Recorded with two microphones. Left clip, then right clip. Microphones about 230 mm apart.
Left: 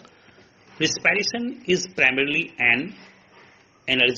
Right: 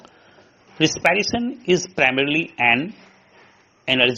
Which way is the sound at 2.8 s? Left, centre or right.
Centre.